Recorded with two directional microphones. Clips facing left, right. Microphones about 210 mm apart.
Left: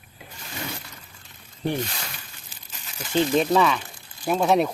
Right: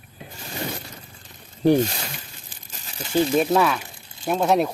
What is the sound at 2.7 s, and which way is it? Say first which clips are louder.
Crumpling: right 2 dB; 40° right (ahead or behind).